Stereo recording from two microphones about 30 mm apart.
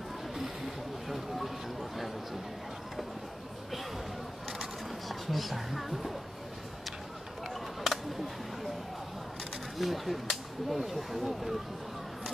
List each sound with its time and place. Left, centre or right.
1.0 s vehicle: centre
5.0 s speech: centre
7.4 s a sound: centre
9.8 s speech: centre